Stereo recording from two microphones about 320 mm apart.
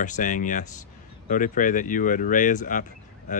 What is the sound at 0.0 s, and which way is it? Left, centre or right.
Speech, left.